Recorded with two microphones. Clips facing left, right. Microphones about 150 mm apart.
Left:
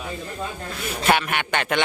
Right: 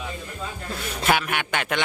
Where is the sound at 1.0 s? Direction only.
5° right (ahead or behind).